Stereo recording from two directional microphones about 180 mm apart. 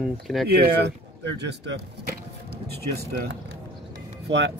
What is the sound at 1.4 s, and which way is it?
Speech, 70° right (ahead or behind).